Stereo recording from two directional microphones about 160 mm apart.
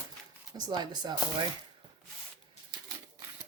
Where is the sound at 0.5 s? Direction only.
25° right (ahead or behind).